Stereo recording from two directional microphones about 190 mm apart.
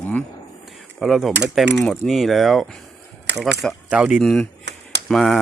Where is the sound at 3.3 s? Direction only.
65° right (ahead or behind).